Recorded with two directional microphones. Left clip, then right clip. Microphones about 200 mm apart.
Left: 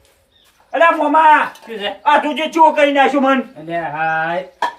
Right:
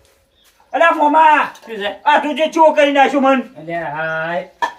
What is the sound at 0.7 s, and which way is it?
A man's voice, centre (ahead or behind).